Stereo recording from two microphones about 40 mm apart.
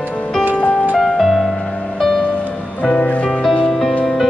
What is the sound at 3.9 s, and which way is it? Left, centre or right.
Music, left.